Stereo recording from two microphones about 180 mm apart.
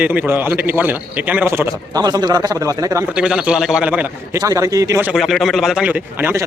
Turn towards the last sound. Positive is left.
turn(degrees=-10)  # may be behind; listen again after turning